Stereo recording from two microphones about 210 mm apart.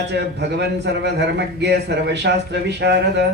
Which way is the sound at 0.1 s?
55° right (ahead or behind).